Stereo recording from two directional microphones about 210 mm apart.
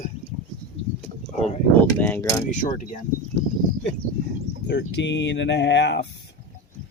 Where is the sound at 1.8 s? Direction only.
10° left (ahead or behind).